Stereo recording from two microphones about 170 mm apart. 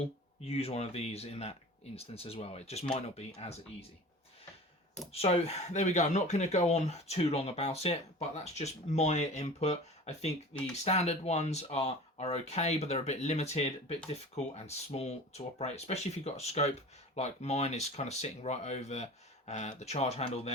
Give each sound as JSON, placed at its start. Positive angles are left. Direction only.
{"t": 0.0, "sound": "speech", "side_deg": 35}
{"t": 5.1, "sound": "speech", "side_deg": 35}